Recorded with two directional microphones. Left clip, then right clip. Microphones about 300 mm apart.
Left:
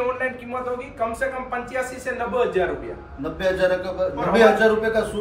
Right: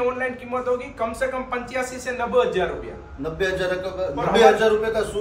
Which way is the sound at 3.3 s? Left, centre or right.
Centre.